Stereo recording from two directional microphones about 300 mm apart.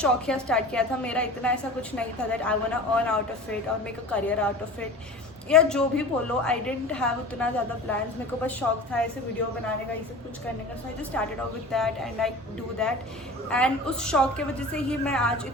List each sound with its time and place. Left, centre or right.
0.0 s a woman's voice: centre
11.1 s a woman's voice: centre